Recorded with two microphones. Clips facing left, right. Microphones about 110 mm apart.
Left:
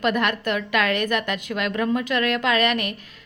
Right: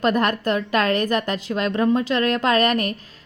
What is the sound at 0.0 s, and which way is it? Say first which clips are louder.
A woman's voice: right 3 dB; 35° right (ahead or behind).